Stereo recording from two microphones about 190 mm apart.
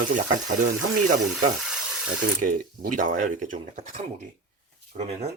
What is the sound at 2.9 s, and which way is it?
Speech, 45° right (ahead or behind).